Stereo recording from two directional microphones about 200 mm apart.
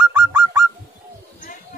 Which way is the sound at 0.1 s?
10° right (ahead or behind).